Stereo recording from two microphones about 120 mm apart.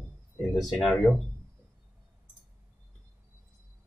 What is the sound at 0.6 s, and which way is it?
Speech, centre (ahead or behind).